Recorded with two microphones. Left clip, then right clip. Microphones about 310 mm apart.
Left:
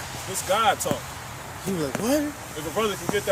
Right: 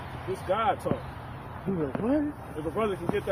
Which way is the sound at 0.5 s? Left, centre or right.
Centre.